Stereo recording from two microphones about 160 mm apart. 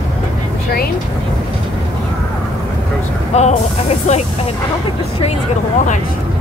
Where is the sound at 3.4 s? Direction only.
45° left (ahead or behind).